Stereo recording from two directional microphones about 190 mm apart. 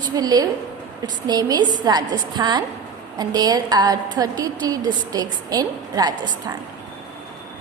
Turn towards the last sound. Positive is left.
turn(degrees=-20)  # may be behind; listen again after turning